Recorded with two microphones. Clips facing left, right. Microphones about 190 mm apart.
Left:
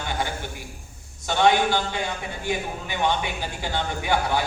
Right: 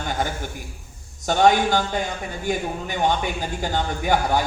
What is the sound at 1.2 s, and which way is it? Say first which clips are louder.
Speech: right 3 dB; 45° right (ahead or behind).